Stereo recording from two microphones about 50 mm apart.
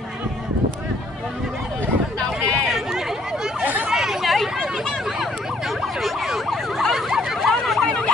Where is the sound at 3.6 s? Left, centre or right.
Right.